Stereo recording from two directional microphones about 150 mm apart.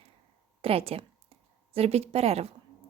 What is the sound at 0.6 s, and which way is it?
A woman's voice, 40° right (ahead or behind).